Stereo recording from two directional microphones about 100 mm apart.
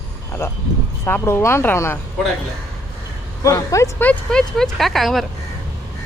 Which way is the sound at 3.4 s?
35° left (ahead or behind).